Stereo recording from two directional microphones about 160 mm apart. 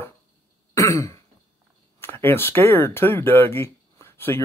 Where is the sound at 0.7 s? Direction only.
15° left (ahead or behind).